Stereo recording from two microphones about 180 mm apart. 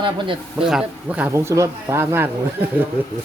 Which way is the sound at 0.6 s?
5° right (ahead or behind).